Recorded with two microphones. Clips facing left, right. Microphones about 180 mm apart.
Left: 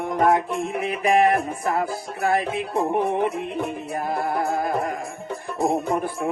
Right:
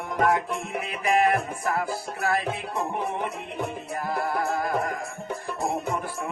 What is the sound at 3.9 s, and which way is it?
Music, 25° left (ahead or behind).